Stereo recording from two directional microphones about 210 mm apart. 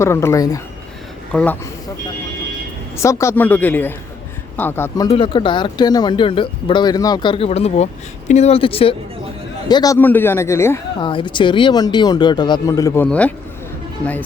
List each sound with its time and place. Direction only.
0.0 s speech: 15° left (ahead or behind)
1.3 s speech: 5° left (ahead or behind)
2.9 s speech: 15° left (ahead or behind)
5.0 s speech: 25° left (ahead or behind)
11.0 s speech: 25° left (ahead or behind); by 14.3 s 10° left (ahead or behind)